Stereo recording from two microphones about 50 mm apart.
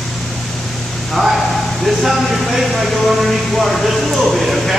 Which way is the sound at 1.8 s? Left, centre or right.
Centre.